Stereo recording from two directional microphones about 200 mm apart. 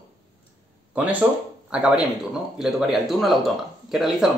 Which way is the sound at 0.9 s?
10° right (ahead or behind).